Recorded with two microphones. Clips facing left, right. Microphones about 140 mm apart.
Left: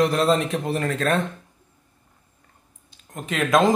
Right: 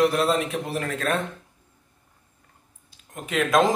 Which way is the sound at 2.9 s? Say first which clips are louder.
Right 2 dB; 5° right (ahead or behind).